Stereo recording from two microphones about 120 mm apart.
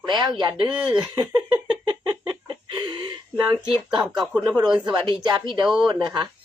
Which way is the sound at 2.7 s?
40° right (ahead or behind).